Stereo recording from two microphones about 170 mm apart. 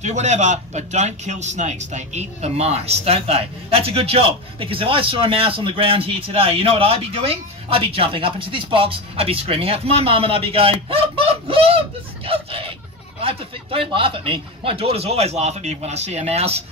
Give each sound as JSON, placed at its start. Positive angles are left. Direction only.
{"t": 0.0, "sound": "a man's voice", "side_deg": -45}